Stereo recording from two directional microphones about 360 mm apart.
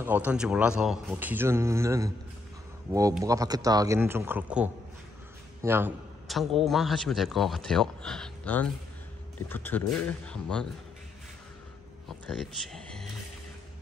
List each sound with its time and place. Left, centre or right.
0.0 s a man's voice: centre
5.6 s a sound: centre
6.6 s a man's voice: centre
12.1 s speech: centre